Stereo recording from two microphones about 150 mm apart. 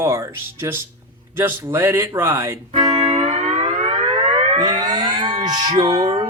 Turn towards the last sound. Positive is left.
turn(degrees=-25)  # may be behind; listen again after turning